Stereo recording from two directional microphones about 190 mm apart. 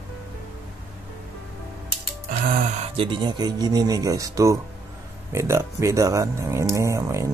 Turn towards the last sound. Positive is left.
turn(degrees=-15)  # may be behind; listen again after turning